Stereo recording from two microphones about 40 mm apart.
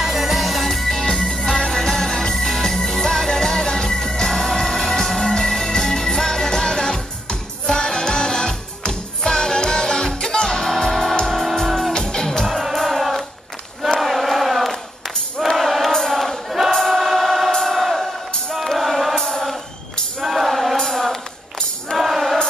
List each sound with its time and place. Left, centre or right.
0.0 s music: centre
13.8 s choir: centre
15.4 s music: centre
16.7 s choir: centre
18.5 s music: centre
19.1 s music: centre
20.2 s music: centre
20.9 s a sound: centre
21.9 s music: centre